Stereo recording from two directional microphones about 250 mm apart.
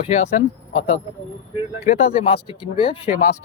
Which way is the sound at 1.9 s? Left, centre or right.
Left.